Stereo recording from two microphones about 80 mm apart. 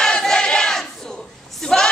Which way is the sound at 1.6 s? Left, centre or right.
Centre.